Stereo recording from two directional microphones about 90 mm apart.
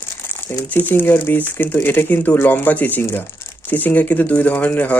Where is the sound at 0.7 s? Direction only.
20° left (ahead or behind).